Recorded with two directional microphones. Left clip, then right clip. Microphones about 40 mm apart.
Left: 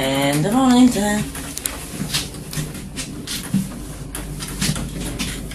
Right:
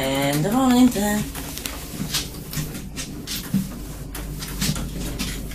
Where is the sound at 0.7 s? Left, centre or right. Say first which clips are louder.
Left 3 dB; centre.